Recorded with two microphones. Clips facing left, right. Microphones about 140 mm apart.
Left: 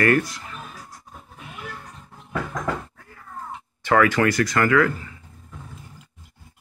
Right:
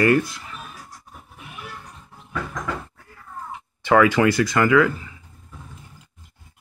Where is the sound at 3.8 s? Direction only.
15° right (ahead or behind).